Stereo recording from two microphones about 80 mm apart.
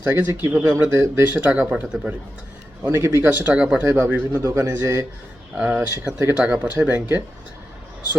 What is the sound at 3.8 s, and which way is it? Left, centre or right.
A man's voice, right.